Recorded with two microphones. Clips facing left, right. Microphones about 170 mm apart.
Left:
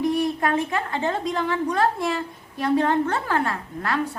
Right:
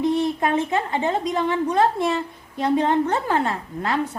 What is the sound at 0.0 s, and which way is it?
A woman's voice, 20° right (ahead or behind).